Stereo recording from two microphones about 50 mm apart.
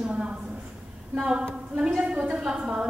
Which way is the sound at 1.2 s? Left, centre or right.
Centre.